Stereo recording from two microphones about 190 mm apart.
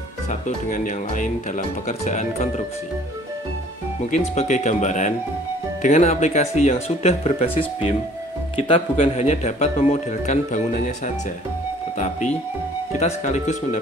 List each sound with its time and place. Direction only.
0.3 s speech: 45° left (ahead or behind)
4.0 s speech: 40° left (ahead or behind)
8.5 s speech: 30° left (ahead or behind)
13.0 s speech: 35° left (ahead or behind)